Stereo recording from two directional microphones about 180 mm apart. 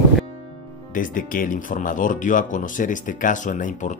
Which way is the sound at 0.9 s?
50° left (ahead or behind).